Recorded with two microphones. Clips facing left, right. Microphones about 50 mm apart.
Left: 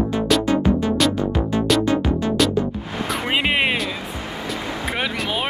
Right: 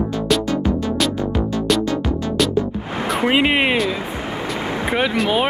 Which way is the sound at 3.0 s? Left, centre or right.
Centre.